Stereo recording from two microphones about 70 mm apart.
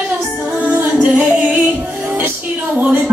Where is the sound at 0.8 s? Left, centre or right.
Centre.